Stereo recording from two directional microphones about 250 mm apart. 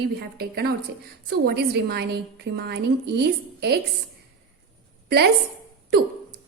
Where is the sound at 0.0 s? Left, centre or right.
Right.